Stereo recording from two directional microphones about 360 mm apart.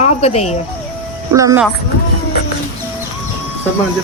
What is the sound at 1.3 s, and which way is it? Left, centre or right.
Speech, centre.